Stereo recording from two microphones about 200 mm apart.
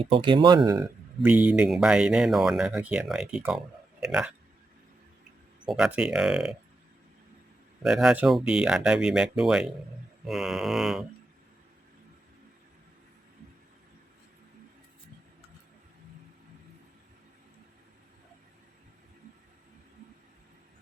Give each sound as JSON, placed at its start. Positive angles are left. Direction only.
{"t": 0.0, "sound": "speech", "side_deg": -25}
{"t": 1.2, "sound": "speech", "side_deg": -10}
{"t": 5.6, "sound": "speech", "side_deg": -5}
{"t": 7.8, "sound": "speech", "side_deg": 0}